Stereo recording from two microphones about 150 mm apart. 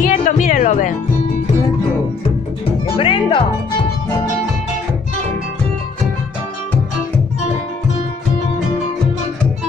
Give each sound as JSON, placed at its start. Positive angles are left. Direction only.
{"t": 0.0, "sound": "music", "side_deg": 60}
{"t": 3.0, "sound": "music", "side_deg": 35}